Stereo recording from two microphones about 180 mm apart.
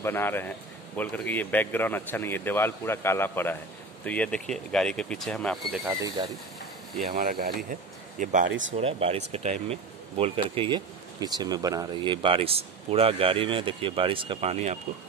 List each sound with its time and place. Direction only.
0.0 s speech: 10° left (ahead or behind)
5.9 s speech: 20° right (ahead or behind)
7.1 s speech: 55° right (ahead or behind)
8.5 s speech: 90° right
8.7 s speech: 35° right (ahead or behind)